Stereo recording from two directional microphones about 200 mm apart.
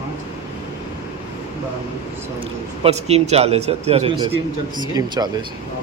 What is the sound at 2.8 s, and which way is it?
A man's voice, 30° right (ahead or behind).